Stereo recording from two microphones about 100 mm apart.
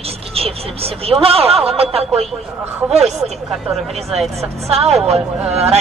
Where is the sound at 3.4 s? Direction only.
5° right (ahead or behind).